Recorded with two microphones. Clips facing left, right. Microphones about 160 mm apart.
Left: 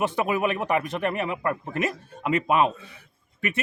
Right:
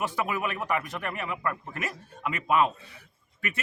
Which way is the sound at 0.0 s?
25° left (ahead or behind).